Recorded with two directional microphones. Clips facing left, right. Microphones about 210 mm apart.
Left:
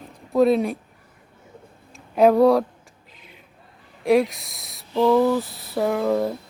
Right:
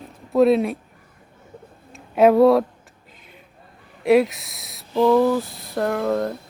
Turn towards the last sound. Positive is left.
turn(degrees=5)  # may be behind; listen again after turning